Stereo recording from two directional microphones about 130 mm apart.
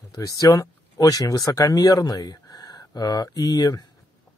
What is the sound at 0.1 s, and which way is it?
Speech, 25° left (ahead or behind).